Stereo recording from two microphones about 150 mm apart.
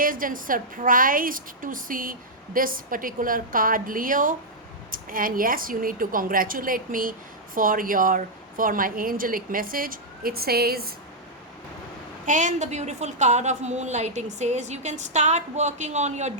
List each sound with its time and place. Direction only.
0.0 s a woman's voice: 65° right (ahead or behind); by 10.9 s 90° right
12.2 s a woman's voice: 55° right (ahead or behind)